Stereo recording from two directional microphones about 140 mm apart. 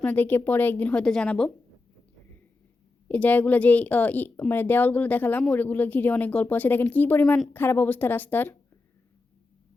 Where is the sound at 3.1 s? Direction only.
10° left (ahead or behind).